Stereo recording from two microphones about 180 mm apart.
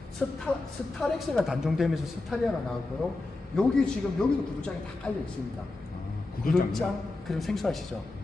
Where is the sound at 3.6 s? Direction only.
5° left (ahead or behind).